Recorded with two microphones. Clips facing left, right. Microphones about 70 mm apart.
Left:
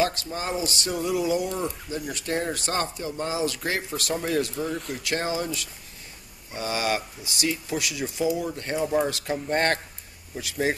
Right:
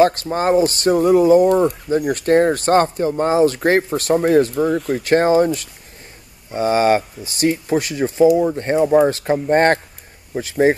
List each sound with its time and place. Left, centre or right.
0.0 s speech: right